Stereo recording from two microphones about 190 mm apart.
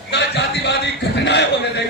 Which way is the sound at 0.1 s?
65° left (ahead or behind).